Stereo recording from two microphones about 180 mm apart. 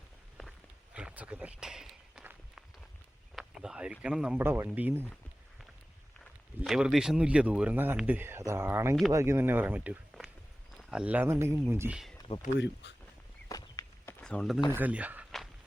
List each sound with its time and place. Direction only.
0.9 s run: 5° right (ahead or behind)
3.3 s a sound: 5° right (ahead or behind)
4.0 s speech: 5° right (ahead or behind)
6.6 s speech: 5° right (ahead or behind)
12.5 s speech: 75° left (ahead or behind)
13.5 s a sound: 20° left (ahead or behind); by 14.6 s centre (ahead or behind)
14.7 s speech: 10° right (ahead or behind)